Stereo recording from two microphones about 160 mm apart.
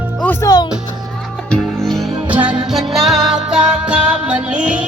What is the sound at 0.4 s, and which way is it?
Music, 25° left (ahead or behind).